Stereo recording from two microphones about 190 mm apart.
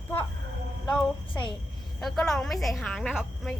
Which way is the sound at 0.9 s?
5° left (ahead or behind).